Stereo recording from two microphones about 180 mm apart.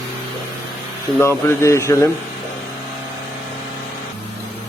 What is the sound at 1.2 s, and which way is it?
Speech, 15° left (ahead or behind).